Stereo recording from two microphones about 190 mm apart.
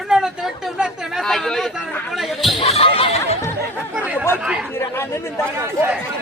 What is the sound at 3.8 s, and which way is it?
Speech, 10° right (ahead or behind).